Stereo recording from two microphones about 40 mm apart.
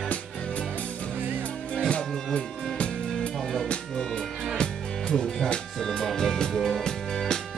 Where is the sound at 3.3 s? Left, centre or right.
Centre.